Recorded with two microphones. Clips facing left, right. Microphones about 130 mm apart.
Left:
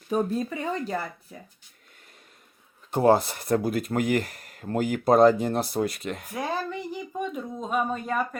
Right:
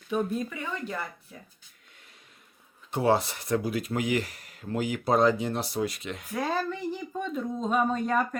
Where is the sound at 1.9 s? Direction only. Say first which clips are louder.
Left 2 dB; 45° left (ahead or behind).